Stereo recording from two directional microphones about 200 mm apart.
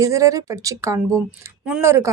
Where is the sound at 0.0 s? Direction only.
15° right (ahead or behind).